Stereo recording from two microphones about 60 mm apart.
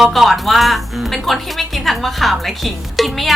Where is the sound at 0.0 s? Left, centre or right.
Centre.